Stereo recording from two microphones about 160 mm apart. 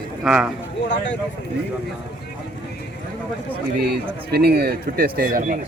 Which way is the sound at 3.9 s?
80° right.